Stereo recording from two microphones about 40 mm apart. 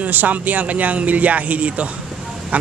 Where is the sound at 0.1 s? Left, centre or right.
Right.